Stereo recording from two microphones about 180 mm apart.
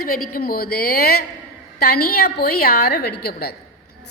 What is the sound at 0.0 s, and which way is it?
A woman's voice, 55° left (ahead or behind).